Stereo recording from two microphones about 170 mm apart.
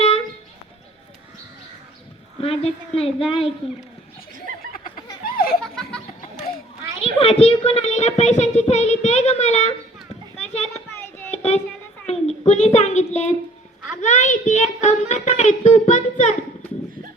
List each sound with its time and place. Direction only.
2.4 s a child's voice: 35° left (ahead or behind)
5.2 s children playing: 60° left (ahead or behind)
7.0 s a child's voice: 35° left (ahead or behind)
10.3 s children playing: 40° left (ahead or behind)
11.3 s a sound: 40° left (ahead or behind)
12.0 s a child's voice: 40° left (ahead or behind)